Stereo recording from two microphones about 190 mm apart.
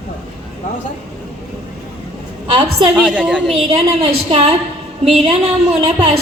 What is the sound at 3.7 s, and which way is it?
A woman's voice, 30° right (ahead or behind).